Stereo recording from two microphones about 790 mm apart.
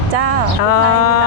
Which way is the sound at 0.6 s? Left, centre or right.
Left.